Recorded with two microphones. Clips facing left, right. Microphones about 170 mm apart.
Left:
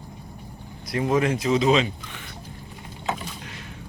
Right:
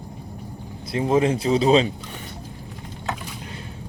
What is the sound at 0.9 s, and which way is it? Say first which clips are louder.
Speech: right 2 dB; 30° right (ahead or behind).